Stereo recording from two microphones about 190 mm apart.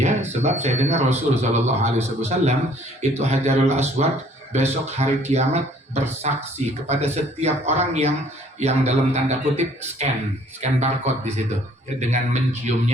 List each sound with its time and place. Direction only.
0.0 s speech: 35° right (ahead or behind)